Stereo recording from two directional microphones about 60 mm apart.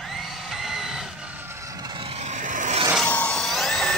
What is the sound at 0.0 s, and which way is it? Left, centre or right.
Music, centre.